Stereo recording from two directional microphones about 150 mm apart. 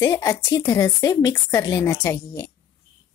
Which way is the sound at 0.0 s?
20° left (ahead or behind).